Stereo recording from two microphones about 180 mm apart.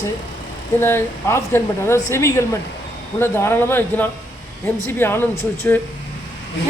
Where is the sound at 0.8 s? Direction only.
15° left (ahead or behind).